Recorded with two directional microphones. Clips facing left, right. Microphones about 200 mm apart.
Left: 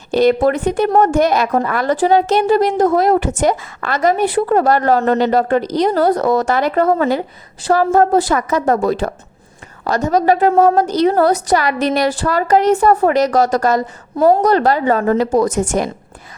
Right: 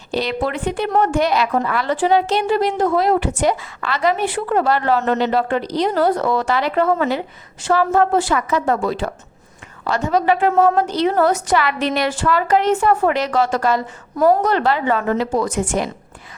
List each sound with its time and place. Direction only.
0.1 s a woman's voice: 50° left (ahead or behind)